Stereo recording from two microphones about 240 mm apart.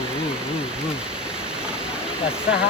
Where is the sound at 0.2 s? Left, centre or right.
Centre.